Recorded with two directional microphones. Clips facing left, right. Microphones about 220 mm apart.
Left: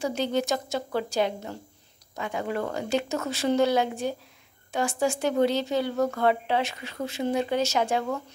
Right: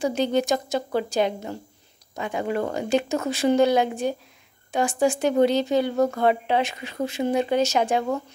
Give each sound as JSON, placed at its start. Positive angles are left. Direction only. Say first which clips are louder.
{"t": 0.0, "sound": "speech", "louder": "right 4 dB", "side_deg": -15}